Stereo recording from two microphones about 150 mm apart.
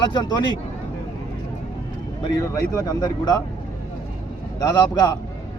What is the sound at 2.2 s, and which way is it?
A man's voice, 20° left (ahead or behind).